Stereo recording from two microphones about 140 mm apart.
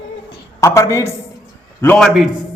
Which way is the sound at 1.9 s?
Centre (ahead or behind).